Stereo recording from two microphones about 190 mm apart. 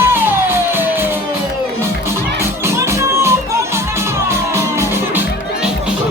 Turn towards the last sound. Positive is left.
turn(degrees=-15)  # may be behind; listen again after turning